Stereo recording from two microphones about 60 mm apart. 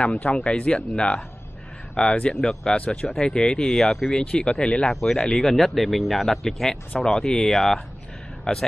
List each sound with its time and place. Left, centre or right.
0.0 s speech: left